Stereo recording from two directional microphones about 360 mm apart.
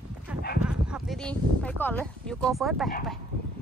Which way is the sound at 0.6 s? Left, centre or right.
Centre.